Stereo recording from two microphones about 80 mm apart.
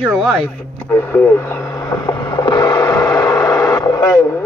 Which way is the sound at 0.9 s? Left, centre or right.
Left.